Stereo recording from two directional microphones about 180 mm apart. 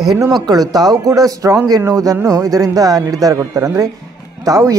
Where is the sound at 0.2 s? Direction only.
20° right (ahead or behind).